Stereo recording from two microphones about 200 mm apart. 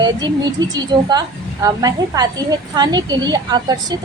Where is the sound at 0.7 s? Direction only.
20° right (ahead or behind).